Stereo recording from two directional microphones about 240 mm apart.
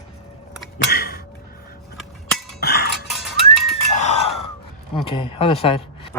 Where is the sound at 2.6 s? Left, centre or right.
Left.